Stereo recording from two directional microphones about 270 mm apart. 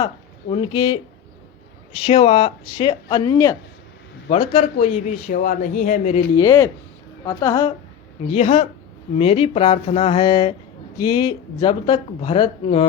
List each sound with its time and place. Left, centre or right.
0.5 s speech: centre
2.0 s speech: left
4.3 s speech: left
6.3 s speech: centre